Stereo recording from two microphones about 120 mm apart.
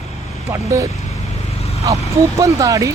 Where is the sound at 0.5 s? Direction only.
25° right (ahead or behind).